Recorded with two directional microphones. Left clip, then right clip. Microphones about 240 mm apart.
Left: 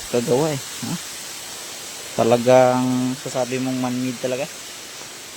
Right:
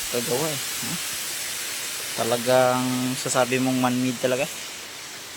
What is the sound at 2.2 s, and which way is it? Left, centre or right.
Speech, left.